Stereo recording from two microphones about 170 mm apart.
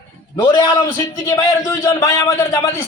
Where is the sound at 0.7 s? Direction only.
20° left (ahead or behind).